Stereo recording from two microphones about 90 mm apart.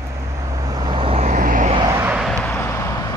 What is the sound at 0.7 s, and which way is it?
Vehicle, 60° right (ahead or behind).